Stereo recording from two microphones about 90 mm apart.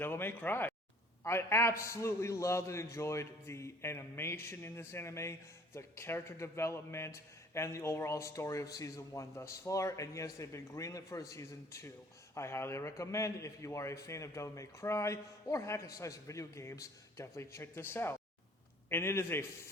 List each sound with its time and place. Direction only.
0.0 s a man's voice: 25° left (ahead or behind)